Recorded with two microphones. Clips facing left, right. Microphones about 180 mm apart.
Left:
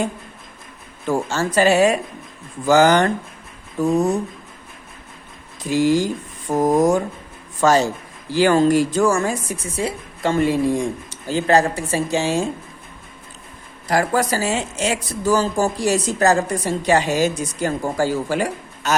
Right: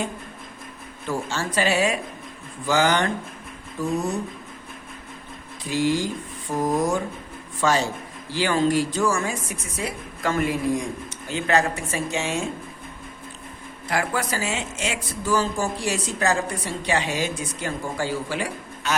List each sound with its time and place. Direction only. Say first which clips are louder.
1.0 s speech: left 6 dB; 45° left (ahead or behind)
5.6 s speech: left 6 dB; 45° left (ahead or behind)
9.7 s speech: left 5 dB; 30° left (ahead or behind)
13.8 s speech: left 7 dB; 40° left (ahead or behind)